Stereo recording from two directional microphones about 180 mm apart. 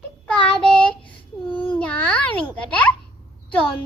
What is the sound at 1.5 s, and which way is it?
Babbling, 10° left (ahead or behind).